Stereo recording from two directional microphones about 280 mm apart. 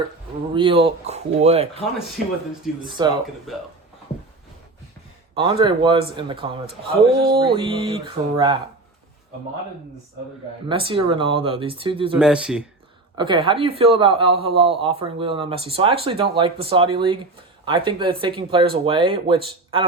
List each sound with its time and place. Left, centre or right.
0.5 s speech: centre
2.8 s music: centre
3.5 s speech: centre
5.3 s music: centre
6.7 s speech: right
7.4 s music: centre
10.7 s speech: centre
12.2 s speech: centre
13.1 s music: centre
14.3 s speech: centre